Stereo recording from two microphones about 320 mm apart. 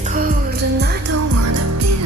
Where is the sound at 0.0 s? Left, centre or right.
Right.